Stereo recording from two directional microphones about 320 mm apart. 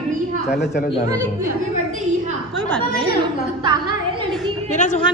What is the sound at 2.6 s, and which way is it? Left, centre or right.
Speech, centre.